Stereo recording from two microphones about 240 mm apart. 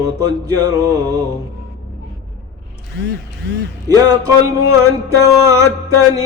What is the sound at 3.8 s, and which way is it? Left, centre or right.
Music, centre.